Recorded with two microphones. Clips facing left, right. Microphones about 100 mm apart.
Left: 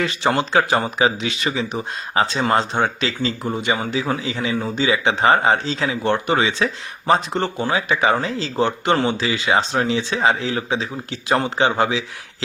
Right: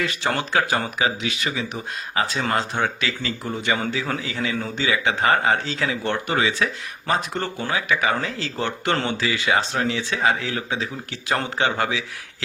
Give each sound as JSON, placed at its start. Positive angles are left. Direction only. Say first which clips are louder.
{"t": 0.0, "sound": "speech", "louder": "left 5 dB", "side_deg": 20}